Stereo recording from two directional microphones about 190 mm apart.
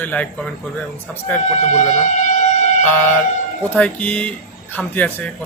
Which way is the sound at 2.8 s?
10° left (ahead or behind).